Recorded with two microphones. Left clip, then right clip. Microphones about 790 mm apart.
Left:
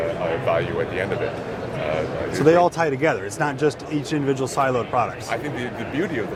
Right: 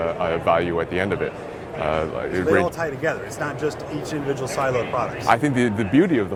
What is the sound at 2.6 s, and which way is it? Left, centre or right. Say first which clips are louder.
A man's voice: left 4 dB; left.